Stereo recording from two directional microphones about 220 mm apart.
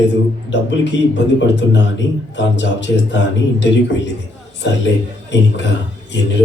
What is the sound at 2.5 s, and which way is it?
Speech, 55° left (ahead or behind).